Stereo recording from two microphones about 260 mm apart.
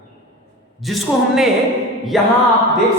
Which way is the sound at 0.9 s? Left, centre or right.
Centre.